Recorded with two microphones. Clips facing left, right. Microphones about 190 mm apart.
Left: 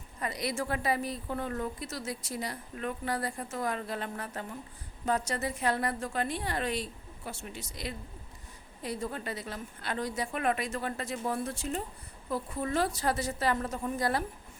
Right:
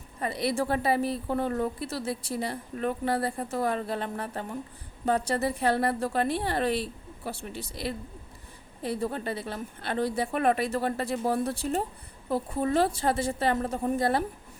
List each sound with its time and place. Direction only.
0.2 s speech: 30° right (ahead or behind)
9.0 s a woman's voice: 30° right (ahead or behind)
14.0 s a woman's voice: 25° right (ahead or behind)